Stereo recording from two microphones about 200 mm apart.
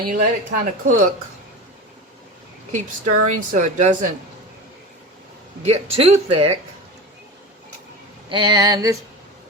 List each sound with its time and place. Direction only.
0.0 s a woman's voice: 40° right (ahead or behind)
2.7 s a woman's voice: 40° right (ahead or behind)
5.6 s speech: 30° right (ahead or behind)
8.3 s speech: 20° right (ahead or behind)